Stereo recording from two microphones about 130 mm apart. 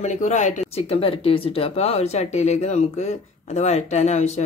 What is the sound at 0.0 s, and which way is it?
Speech, 65° left (ahead or behind).